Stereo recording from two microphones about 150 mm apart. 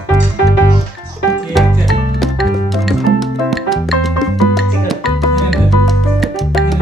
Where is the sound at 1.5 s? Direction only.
Centre (ahead or behind).